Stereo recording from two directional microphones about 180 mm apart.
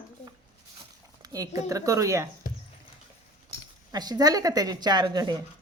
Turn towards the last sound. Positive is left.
turn(degrees=-25)  # may be behind; listen again after turning